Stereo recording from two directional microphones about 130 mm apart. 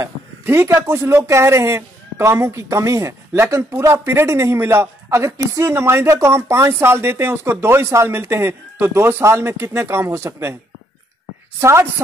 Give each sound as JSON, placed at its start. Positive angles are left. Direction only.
{"t": 0.0, "sound": "speech", "side_deg": -20}
{"t": 11.6, "sound": "speech", "side_deg": -20}